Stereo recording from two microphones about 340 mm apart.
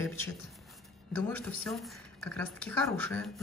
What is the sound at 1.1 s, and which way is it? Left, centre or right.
Speech, centre.